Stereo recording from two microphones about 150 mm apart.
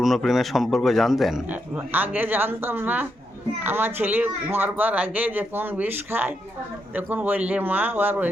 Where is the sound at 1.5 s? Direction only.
10° right (ahead or behind).